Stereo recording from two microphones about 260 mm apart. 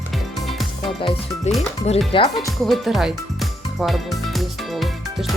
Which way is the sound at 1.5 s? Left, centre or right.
Left.